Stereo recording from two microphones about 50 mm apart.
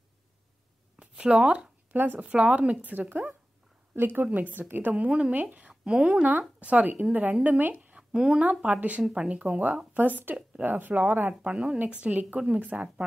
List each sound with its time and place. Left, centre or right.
0.9 s a sound: right
1.9 s speech: right
2.2 s a woman's voice: right
4.3 s speech: right
4.9 s speech: right
5.3 s speech: right
5.7 s a woman's voice: centre
6.6 s speech: right
7.9 s a sound: centre
8.4 s speech: right
11.4 s speech: centre
11.8 s speech: right